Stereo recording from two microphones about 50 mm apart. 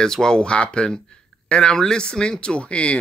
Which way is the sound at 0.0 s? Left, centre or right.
Centre.